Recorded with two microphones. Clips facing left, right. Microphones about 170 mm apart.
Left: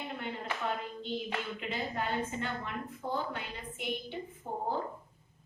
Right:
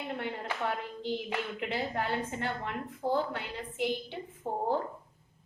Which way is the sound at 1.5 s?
70° right (ahead or behind).